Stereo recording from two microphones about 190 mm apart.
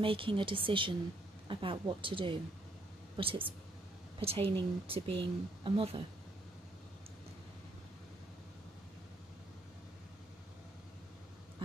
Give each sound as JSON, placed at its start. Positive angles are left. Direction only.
{"t": 0.0, "sound": "speech", "side_deg": -30}